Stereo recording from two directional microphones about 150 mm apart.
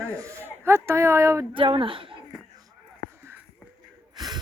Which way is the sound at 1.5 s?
35° right (ahead or behind).